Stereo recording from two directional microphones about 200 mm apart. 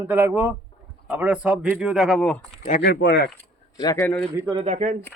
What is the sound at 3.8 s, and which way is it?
Speech, 15° left (ahead or behind).